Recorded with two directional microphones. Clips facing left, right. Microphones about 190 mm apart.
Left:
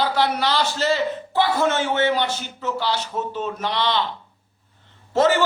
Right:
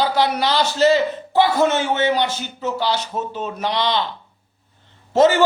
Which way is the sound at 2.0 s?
15° right (ahead or behind).